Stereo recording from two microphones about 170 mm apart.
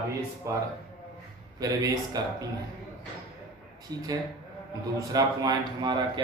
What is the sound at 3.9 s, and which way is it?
Speech, 25° right (ahead or behind).